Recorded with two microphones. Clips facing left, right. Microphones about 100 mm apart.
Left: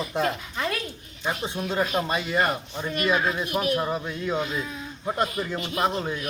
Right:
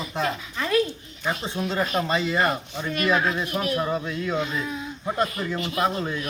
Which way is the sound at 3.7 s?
25° left (ahead or behind).